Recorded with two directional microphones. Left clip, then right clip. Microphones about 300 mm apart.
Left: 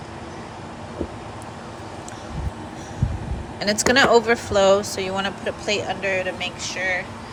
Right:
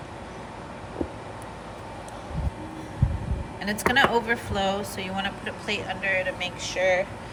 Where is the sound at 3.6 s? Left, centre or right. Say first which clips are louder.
Left 4 dB; centre.